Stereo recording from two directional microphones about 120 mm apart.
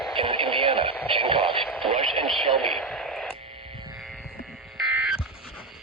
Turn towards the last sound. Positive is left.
turn(degrees=-10)  # may be behind; listen again after turning